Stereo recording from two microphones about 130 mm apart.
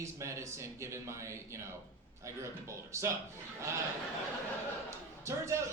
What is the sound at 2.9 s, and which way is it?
Speech, 20° right (ahead or behind).